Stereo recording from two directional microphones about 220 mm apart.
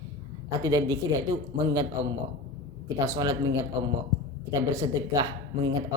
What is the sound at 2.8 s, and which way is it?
Speech, 15° right (ahead or behind).